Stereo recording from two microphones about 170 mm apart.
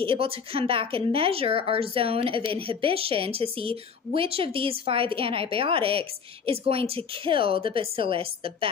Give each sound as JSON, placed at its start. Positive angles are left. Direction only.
{"t": 0.0, "sound": "speech", "side_deg": -35}